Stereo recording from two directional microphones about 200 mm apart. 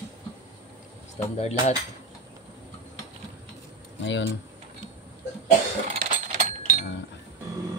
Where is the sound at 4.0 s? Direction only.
65° left (ahead or behind).